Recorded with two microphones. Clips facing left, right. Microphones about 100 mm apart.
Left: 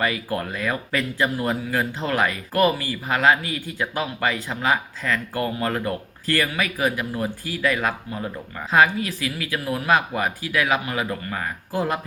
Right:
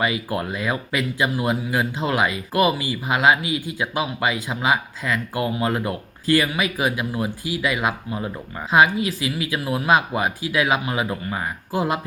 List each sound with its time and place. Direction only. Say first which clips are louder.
0.0 s speech: right 1 dB; 15° right (ahead or behind)